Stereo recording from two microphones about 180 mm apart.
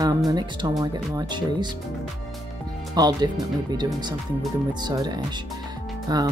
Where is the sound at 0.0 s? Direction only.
20° right (ahead or behind).